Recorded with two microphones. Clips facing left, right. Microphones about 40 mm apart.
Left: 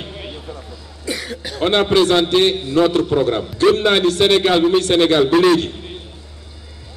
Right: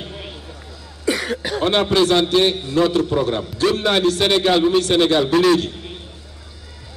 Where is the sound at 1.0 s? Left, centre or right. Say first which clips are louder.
Right 5 dB; right.